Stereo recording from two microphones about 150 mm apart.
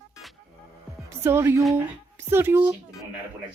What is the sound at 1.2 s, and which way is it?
Music, 15° right (ahead or behind).